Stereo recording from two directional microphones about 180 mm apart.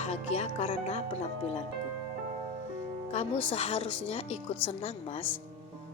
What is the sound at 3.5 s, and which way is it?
Speech, 35° left (ahead or behind).